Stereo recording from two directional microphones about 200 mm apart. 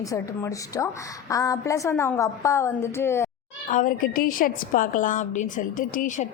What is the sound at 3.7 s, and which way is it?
A woman's voice, 40° left (ahead or behind).